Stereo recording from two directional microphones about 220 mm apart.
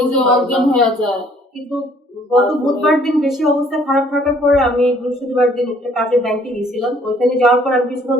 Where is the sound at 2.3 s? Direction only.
Centre (ahead or behind).